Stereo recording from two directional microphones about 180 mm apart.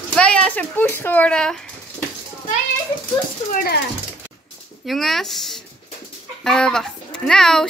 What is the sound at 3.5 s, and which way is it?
Speech, 50° left (ahead or behind).